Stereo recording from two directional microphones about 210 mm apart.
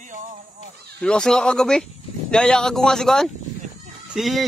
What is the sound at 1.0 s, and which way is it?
Speech, 5° left (ahead or behind).